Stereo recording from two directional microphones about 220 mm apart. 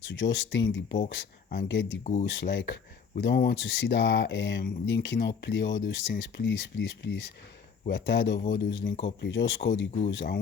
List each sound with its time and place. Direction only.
0.0 s speech: 55° left (ahead or behind)